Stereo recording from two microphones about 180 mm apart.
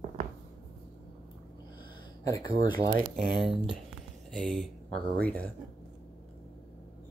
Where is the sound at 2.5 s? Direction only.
55° right (ahead or behind).